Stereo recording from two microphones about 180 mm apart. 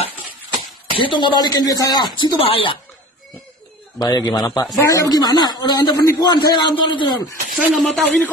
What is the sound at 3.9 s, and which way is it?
Speech, 20° left (ahead or behind).